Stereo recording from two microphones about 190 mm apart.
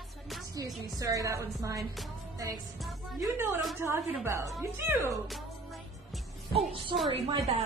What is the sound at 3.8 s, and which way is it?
A woman's voice, 15° right (ahead or behind).